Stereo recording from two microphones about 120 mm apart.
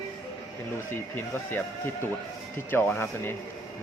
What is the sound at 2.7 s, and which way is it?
Speech, 15° left (ahead or behind).